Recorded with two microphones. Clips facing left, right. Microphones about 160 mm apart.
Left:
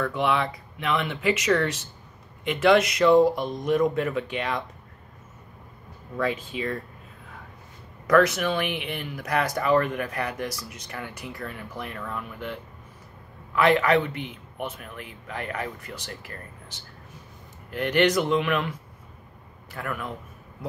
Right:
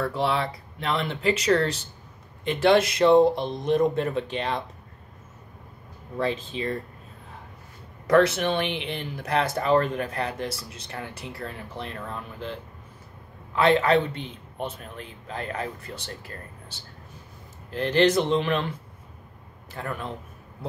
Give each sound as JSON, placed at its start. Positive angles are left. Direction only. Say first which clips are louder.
{"t": 0.0, "sound": "speech", "louder": "left 1 dB", "side_deg": -35}
{"t": 6.1, "sound": "speech", "louder": "even", "side_deg": -30}
{"t": 8.1, "sound": "speech", "louder": "even", "side_deg": -30}
{"t": 13.6, "sound": "speech", "louder": "even", "side_deg": -30}